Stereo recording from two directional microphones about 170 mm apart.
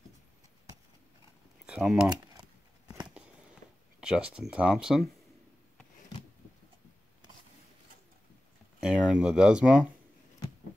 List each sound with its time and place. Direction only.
1.7 s speech: 5° right (ahead or behind)
2.9 s a sound: 5° right (ahead or behind)
4.0 s speech: 5° right (ahead or behind)
8.8 s speech: 5° right (ahead or behind)